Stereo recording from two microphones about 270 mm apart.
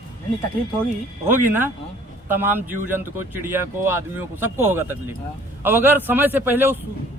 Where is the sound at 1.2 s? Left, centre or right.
Centre.